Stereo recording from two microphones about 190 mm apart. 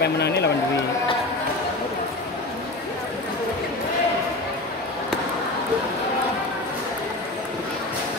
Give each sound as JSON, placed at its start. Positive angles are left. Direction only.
{"t": 0.0, "sound": "speech", "side_deg": 60}